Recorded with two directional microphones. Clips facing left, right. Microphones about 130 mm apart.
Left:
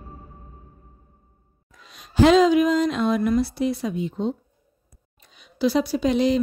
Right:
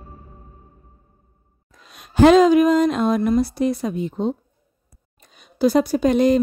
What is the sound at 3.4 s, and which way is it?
Speech, 45° right (ahead or behind).